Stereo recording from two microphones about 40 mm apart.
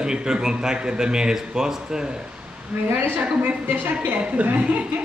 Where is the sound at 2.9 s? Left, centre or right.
Right.